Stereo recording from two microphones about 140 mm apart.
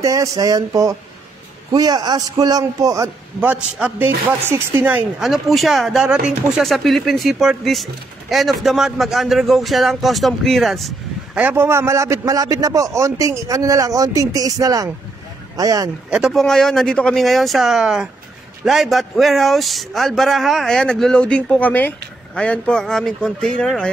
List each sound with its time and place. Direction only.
0.0 s a man's voice: 25° right (ahead or behind)
3.3 s a woman's voice: 10° right (ahead or behind)
11.4 s a man's voice: 15° right (ahead or behind)
16.1 s a woman's voice: 5° right (ahead or behind)